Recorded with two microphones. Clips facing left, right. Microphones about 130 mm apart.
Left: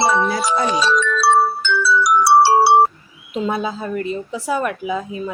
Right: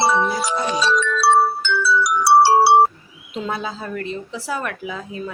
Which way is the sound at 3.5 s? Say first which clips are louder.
Left 5 dB; 15° left (ahead or behind).